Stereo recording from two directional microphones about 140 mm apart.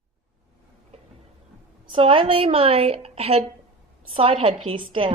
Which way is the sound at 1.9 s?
40° right (ahead or behind).